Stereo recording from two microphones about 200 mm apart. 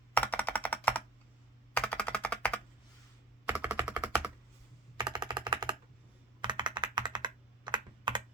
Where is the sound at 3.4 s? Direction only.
10° right (ahead or behind).